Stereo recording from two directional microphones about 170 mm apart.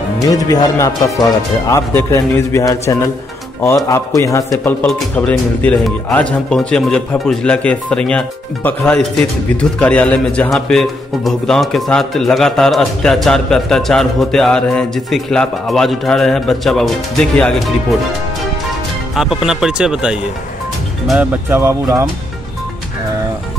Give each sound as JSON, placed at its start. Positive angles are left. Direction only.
{"t": 0.2, "sound": "a man's voice", "side_deg": 20}
{"t": 19.1, "sound": "speech", "side_deg": -5}